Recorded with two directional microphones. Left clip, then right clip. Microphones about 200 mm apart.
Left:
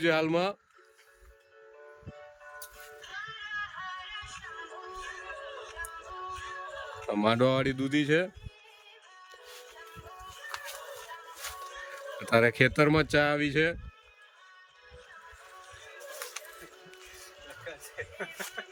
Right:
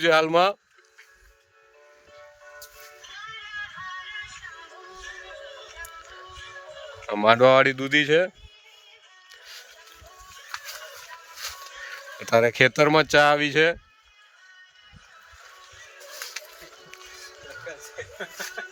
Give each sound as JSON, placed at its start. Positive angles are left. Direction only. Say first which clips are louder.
{"t": 0.0, "sound": "speech", "louder": "right 8 dB", "side_deg": 5}
{"t": 4.0, "sound": "music", "louder": "right 4 dB", "side_deg": 15}
{"t": 7.1, "sound": "speech", "louder": "right 10 dB", "side_deg": 5}
{"t": 12.2, "sound": "speech", "louder": "right 5 dB", "side_deg": 5}
{"t": 17.9, "sound": "a sound", "louder": "right 1 dB", "side_deg": -35}